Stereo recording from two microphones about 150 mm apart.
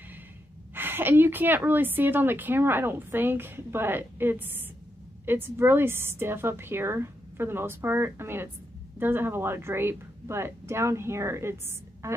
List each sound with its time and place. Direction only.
0.7 s a woman's voice: 15° right (ahead or behind)